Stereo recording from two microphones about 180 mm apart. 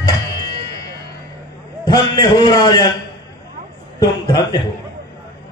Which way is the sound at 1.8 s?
20° left (ahead or behind).